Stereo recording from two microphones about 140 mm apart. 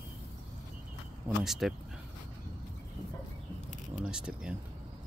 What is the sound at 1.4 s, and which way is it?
Speech, centre (ahead or behind).